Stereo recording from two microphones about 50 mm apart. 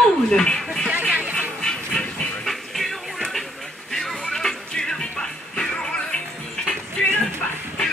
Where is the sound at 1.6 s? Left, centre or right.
Centre.